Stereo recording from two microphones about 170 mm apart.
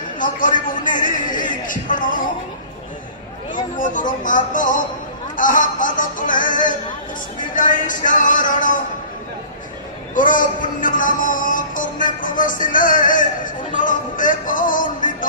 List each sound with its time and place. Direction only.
0.2 s a sound: 50° left (ahead or behind)
3.5 s speech: 50° left (ahead or behind)
5.3 s music: 50° left (ahead or behind)
7.5 s speech: 50° left (ahead or behind)
10.1 s speech: 50° left (ahead or behind)